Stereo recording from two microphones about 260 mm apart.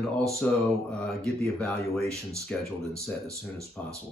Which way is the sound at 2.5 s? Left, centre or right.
Centre.